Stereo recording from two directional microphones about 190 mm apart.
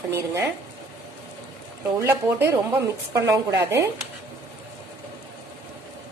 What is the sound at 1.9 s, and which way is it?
A woman's voice, 15° right (ahead or behind).